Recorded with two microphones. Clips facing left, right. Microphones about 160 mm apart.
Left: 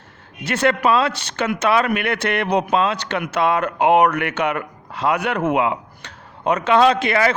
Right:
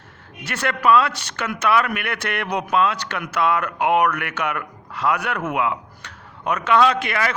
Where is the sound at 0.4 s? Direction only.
20° left (ahead or behind).